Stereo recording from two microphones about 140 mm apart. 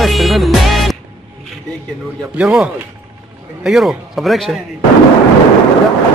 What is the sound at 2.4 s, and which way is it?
Speech, 5° right (ahead or behind).